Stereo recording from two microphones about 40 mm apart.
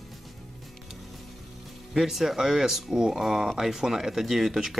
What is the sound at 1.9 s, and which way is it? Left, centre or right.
Speech, centre.